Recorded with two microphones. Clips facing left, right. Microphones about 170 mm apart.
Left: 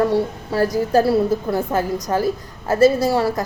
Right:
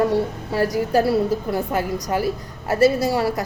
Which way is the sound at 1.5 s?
40° left (ahead or behind).